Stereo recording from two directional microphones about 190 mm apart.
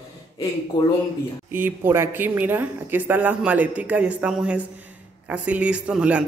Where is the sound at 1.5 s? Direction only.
10° right (ahead or behind).